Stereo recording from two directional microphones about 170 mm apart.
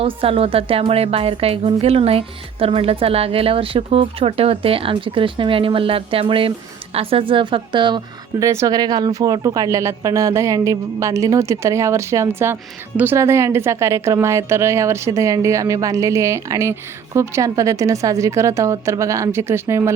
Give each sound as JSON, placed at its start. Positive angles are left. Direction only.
{"t": 0.0, "sound": "a woman's voice", "side_deg": -35}